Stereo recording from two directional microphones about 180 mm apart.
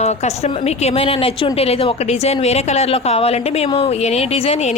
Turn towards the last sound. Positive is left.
turn(degrees=35)  # may be behind; listen again after turning